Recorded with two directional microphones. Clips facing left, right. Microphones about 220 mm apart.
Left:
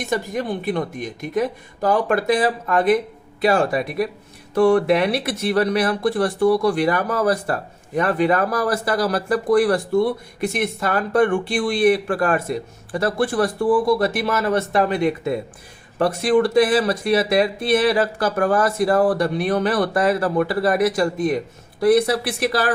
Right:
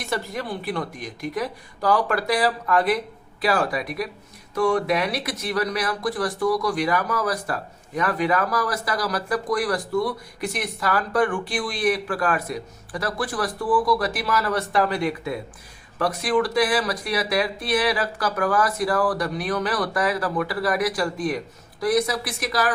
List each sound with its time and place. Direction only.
0.0 s speech: 20° left (ahead or behind)